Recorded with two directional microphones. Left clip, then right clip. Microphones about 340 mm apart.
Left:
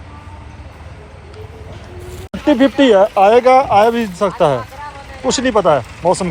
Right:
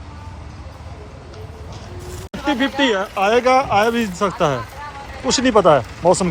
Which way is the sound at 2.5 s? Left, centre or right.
Centre.